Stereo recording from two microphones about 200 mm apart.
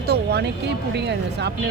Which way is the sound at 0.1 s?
55° right (ahead or behind).